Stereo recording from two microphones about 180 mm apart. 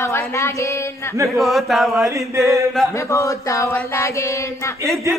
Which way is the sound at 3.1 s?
15° left (ahead or behind).